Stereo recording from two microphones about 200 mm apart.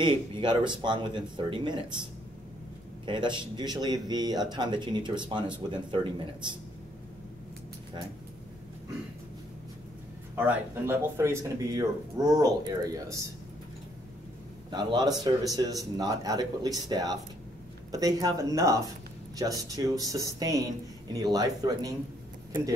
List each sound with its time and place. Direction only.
0.0 s speech: 25° right (ahead or behind)
3.1 s speech: 25° right (ahead or behind)
10.3 s speech: 10° right (ahead or behind)
14.7 s speech: 20° right (ahead or behind)